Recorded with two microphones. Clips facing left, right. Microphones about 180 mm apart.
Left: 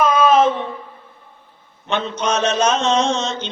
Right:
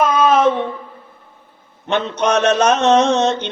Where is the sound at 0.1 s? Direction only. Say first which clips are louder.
Even; 45° right (ahead or behind).